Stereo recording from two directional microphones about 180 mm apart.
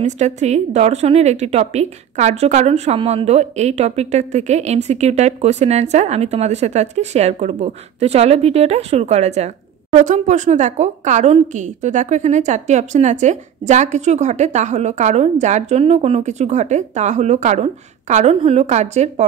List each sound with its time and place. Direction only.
0.0 s a woman's voice: 40° right (ahead or behind)